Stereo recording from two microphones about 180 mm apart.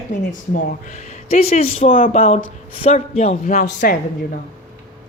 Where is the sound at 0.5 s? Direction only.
40° left (ahead or behind).